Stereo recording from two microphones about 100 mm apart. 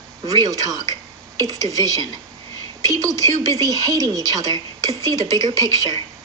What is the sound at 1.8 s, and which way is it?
Speech, 40° right (ahead or behind).